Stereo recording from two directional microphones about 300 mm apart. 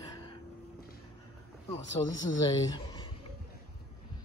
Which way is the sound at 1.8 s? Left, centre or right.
Left.